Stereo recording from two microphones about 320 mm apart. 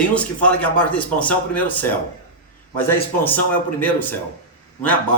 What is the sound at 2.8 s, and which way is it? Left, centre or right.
Speech, centre.